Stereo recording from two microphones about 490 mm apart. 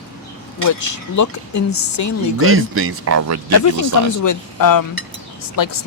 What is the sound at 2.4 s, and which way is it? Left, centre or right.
Speech, right.